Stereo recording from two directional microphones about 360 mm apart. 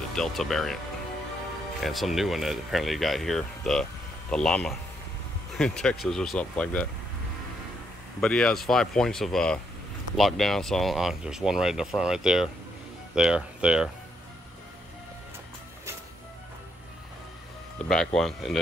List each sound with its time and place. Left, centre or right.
0.1 s speech: centre
1.8 s speech: centre
8.2 s speech: centre
17.7 s speech: centre